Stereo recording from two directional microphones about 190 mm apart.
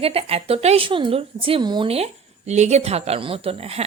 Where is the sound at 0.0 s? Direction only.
30° right (ahead or behind).